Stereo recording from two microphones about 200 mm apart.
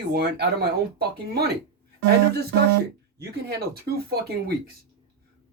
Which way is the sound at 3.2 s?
50° right (ahead or behind).